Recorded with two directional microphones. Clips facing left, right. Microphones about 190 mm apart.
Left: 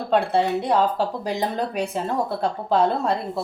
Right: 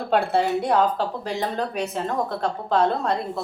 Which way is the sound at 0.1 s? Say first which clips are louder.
Left 1 dB; centre (ahead or behind).